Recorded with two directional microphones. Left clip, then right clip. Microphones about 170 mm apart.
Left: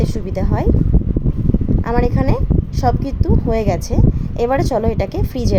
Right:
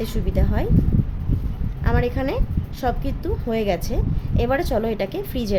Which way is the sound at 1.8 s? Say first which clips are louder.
Left 3 dB; 20° left (ahead or behind).